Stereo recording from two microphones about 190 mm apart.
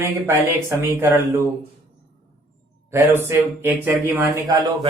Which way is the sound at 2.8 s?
10° right (ahead or behind).